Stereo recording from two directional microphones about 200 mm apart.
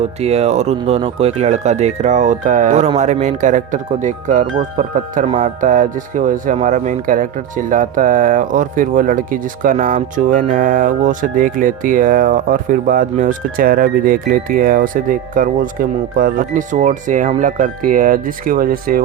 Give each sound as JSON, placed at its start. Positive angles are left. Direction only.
{"t": 0.2, "sound": "speech", "side_deg": -30}